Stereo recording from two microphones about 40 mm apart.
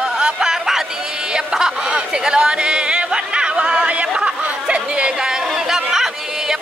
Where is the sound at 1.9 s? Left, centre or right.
Right.